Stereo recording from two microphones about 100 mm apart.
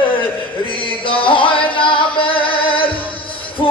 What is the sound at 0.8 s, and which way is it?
Music, 60° left (ahead or behind).